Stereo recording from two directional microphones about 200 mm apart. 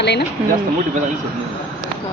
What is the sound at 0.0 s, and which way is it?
Speech, 60° left (ahead or behind).